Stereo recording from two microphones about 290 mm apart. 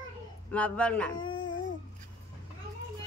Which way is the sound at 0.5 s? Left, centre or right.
Centre.